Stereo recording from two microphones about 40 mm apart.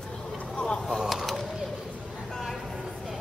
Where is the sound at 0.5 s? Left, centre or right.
Left.